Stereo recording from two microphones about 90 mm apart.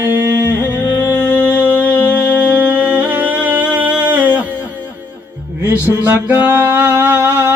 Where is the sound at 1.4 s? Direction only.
20° right (ahead or behind).